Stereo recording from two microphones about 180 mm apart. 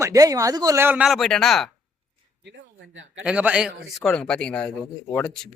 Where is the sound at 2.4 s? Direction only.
80° right.